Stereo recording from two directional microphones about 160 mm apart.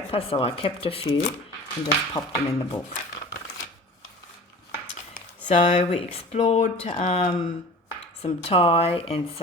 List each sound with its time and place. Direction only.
0.1 s speech: 35° left (ahead or behind)
5.5 s speech: 45° left (ahead or behind)